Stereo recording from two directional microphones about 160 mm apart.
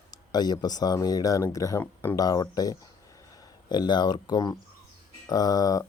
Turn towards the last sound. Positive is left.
turn(degrees=25)  # may be behind; listen again after turning